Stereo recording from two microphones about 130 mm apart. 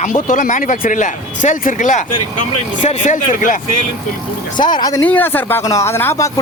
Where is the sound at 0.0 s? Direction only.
75° left (ahead or behind).